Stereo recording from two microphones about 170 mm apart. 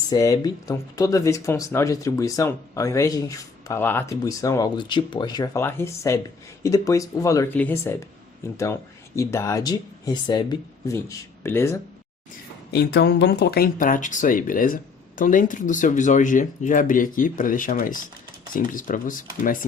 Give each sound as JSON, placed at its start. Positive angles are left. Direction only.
{"t": 0.1, "sound": "speech", "side_deg": 20}
{"t": 5.5, "sound": "speech", "side_deg": 15}
{"t": 12.7, "sound": "speech", "side_deg": 75}